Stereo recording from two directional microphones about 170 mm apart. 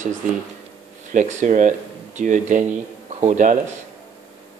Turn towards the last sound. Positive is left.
turn(degrees=-45)  # may be behind; listen again after turning